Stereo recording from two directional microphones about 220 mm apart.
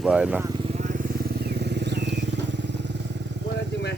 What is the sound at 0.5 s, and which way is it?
Vehicle, 25° right (ahead or behind).